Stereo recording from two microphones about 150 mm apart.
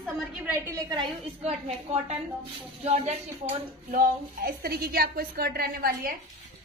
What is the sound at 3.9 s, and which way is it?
A woman's voice, 85° right.